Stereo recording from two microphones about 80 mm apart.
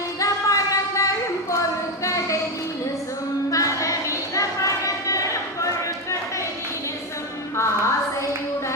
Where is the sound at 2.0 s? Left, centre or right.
Left.